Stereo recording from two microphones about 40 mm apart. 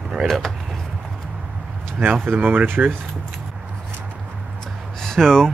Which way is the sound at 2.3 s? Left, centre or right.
Right.